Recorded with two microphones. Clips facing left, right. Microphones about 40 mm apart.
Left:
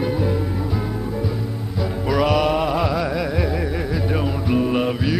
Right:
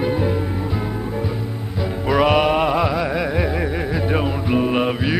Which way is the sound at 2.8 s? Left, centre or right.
Centre.